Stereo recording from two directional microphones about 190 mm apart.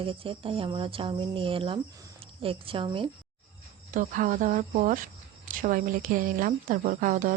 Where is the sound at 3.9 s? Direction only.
45° right (ahead or behind).